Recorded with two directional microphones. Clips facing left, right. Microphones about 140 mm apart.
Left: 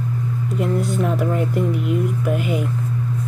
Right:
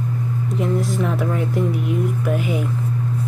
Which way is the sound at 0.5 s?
Centre (ahead or behind).